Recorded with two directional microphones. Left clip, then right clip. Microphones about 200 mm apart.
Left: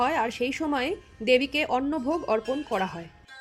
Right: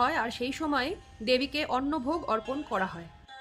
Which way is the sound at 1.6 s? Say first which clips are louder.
Left 3 dB; 10° left (ahead or behind).